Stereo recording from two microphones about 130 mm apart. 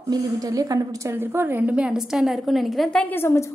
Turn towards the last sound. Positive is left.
turn(degrees=20)  # may be behind; listen again after turning